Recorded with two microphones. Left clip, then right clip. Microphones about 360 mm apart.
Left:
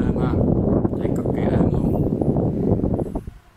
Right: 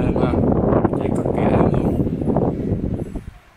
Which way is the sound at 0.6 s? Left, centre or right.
Right.